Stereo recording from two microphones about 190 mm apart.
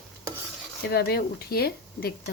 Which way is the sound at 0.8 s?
55° left (ahead or behind).